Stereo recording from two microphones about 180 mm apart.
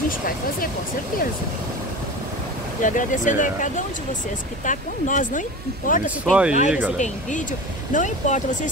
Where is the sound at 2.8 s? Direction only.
45° left (ahead or behind).